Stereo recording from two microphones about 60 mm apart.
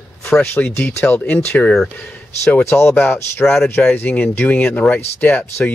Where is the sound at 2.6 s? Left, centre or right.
Left.